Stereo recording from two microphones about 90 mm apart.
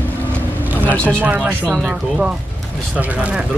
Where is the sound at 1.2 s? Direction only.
15° right (ahead or behind).